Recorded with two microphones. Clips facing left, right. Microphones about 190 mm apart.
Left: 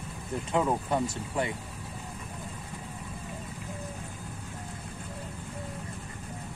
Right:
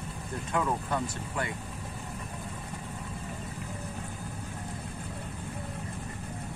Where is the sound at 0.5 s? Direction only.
20° left (ahead or behind).